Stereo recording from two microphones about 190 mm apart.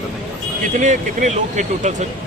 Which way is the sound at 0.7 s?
40° right (ahead or behind).